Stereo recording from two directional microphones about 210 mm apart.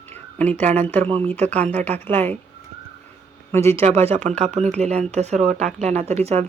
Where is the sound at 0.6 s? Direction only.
10° left (ahead or behind).